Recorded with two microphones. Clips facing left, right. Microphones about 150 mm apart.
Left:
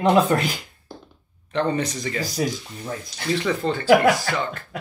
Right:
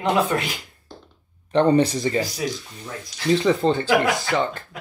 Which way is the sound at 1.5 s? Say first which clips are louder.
Right 6 dB; 30° right (ahead or behind).